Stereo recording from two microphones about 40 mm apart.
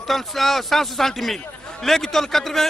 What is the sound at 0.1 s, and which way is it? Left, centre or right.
A man's voice, centre.